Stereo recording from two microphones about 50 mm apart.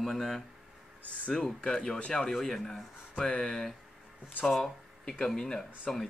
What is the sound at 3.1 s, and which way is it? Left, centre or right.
Speech, centre.